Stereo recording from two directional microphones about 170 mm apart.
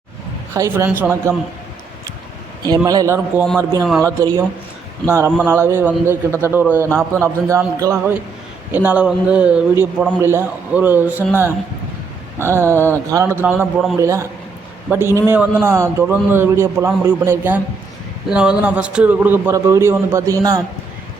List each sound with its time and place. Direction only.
0.5 s a man's voice: 15° right (ahead or behind)
2.6 s a man's voice: 20° right (ahead or behind)
12.4 s a man's voice: 15° right (ahead or behind)